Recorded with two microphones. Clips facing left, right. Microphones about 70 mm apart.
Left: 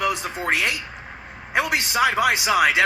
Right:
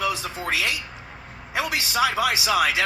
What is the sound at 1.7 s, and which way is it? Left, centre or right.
A man's voice, left.